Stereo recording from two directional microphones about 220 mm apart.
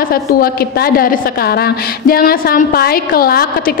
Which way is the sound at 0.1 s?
40° left (ahead or behind).